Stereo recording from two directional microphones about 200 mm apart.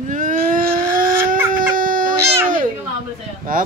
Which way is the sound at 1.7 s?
45° right (ahead or behind).